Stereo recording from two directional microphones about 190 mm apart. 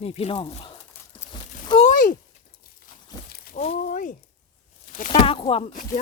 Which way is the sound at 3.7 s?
45° left (ahead or behind).